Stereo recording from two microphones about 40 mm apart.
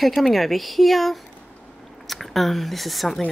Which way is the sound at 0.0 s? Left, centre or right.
Centre.